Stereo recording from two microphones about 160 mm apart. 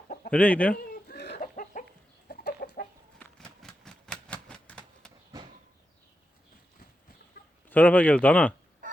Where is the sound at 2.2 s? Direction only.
75° left (ahead or behind).